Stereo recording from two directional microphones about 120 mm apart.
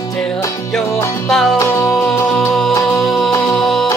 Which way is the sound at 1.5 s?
25° left (ahead or behind).